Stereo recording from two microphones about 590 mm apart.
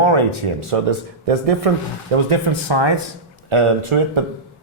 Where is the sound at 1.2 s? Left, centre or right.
Right.